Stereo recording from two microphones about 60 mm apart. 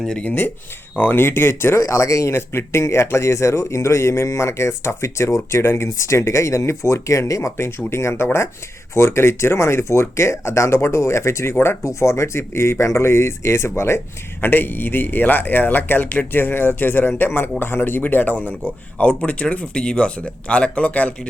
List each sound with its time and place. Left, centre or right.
0.3 s speech: left
1.1 s speech: left
1.8 s speech: left
7.5 s speech: left
14.4 s speech: left